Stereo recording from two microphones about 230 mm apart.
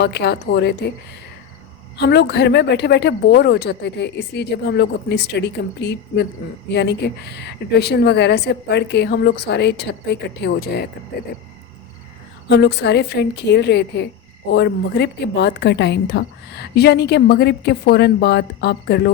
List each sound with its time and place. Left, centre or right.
0.0 s a woman's voice: left
2.0 s a woman's voice: left
12.5 s a woman's voice: left